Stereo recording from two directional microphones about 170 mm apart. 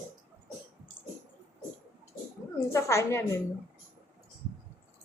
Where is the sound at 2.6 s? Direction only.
15° left (ahead or behind).